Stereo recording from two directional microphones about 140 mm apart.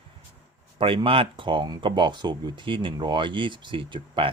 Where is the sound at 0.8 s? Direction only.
40° right (ahead or behind).